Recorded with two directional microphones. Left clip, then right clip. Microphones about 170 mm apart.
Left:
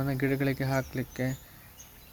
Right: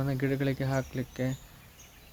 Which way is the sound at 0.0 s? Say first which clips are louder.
Left 1 dB; centre (ahead or behind).